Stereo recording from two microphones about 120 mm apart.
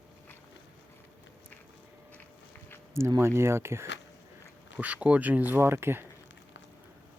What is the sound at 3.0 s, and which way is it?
Speech, 25° right (ahead or behind).